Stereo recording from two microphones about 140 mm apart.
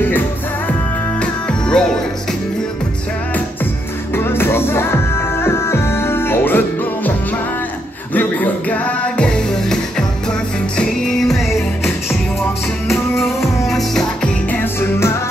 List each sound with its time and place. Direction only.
1.2 s music: 5° left (ahead or behind)
4.1 s music: 15° left (ahead or behind)
8.1 s music: 10° left (ahead or behind)